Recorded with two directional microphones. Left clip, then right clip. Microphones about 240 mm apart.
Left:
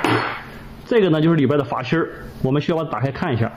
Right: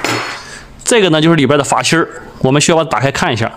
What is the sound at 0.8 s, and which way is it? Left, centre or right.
A man's voice, right.